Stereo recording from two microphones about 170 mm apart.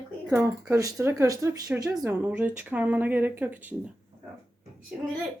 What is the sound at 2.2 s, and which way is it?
Speech, 10° right (ahead or behind).